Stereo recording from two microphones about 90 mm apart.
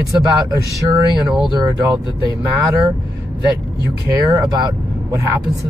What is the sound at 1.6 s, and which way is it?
Speech, 45° right (ahead or behind).